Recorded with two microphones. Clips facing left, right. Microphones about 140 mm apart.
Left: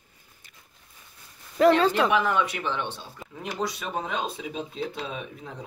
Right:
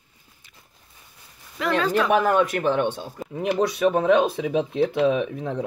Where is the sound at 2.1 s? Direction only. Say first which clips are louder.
Right 5 dB; 45° right (ahead or behind).